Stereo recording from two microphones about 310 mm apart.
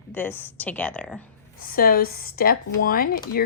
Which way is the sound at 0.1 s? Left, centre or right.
Centre.